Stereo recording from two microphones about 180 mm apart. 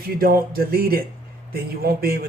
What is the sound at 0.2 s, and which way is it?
A man's voice, 55° right (ahead or behind).